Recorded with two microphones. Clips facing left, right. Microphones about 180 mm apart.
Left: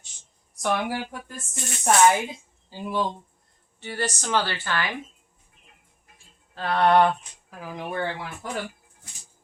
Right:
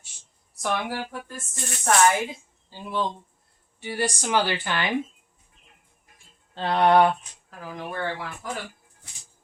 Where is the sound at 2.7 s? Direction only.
10° left (ahead or behind).